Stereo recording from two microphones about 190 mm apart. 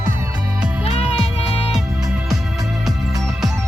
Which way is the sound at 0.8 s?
30° left (ahead or behind).